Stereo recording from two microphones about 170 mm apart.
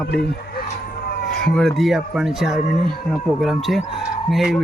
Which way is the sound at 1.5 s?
Centre (ahead or behind).